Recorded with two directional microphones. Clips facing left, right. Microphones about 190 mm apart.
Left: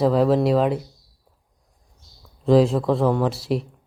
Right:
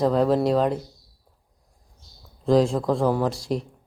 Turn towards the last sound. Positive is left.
turn(degrees=5)  # may be behind; listen again after turning